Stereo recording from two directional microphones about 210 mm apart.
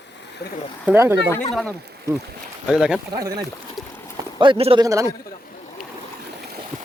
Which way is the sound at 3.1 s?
15° right (ahead or behind).